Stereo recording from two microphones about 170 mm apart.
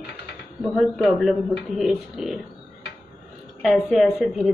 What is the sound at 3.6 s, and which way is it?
Speech, centre (ahead or behind).